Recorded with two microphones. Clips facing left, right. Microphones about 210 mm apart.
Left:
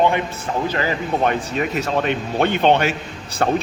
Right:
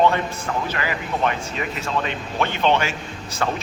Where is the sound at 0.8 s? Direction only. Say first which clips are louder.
Left 5 dB; 45° left (ahead or behind).